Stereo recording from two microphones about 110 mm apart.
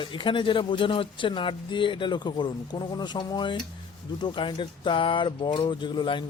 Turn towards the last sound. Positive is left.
turn(degrees=45)  # may be behind; listen again after turning